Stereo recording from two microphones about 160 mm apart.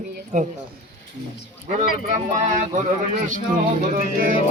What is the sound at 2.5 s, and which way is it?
Speech, 50° right (ahead or behind).